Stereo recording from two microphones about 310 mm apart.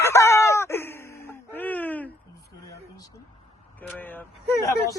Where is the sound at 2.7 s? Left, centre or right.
Centre.